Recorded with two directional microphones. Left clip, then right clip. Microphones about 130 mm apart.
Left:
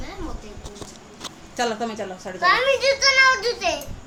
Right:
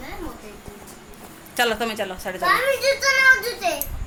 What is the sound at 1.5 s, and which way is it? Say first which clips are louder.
Speech: right 3 dB; centre (ahead or behind).